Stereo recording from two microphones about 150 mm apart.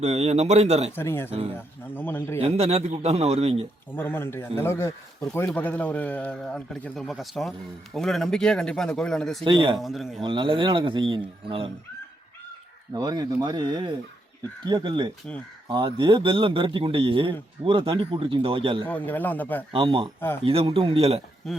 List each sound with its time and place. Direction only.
0.0 s a man's voice: 45° right (ahead or behind)
0.9 s a man's voice: 15° left (ahead or behind)
2.4 s a man's voice: 45° right (ahead or behind)
3.9 s a man's voice: 15° left (ahead or behind)
9.4 s speech: 30° right (ahead or behind)
9.7 s speech: centre (ahead or behind)
10.2 s speech: 35° right (ahead or behind)
12.9 s speech: 25° right (ahead or behind)
18.9 s a man's voice: 10° left (ahead or behind)
19.7 s speech: 35° right (ahead or behind)
20.1 s a man's voice: 15° left (ahead or behind)
20.4 s speech: 40° right (ahead or behind)